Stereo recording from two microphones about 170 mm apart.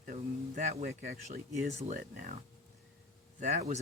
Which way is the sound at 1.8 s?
55° right (ahead or behind).